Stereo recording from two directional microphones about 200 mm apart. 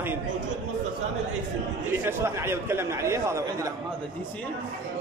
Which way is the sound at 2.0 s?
15° right (ahead or behind).